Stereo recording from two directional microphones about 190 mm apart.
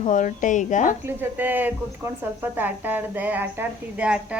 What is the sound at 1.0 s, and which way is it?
A woman's voice, 10° right (ahead or behind).